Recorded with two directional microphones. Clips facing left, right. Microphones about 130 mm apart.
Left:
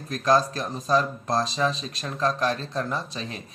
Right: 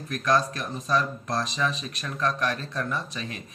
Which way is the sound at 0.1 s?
30° left (ahead or behind).